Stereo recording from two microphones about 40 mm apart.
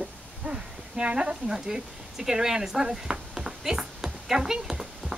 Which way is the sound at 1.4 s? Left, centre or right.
Centre.